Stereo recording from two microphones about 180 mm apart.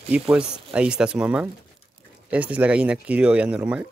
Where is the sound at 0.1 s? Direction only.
5° right (ahead or behind).